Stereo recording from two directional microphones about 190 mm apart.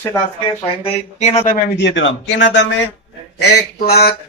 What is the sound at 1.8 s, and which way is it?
Speech, 75° left (ahead or behind).